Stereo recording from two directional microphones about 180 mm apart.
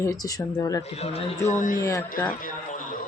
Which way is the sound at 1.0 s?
35° left (ahead or behind).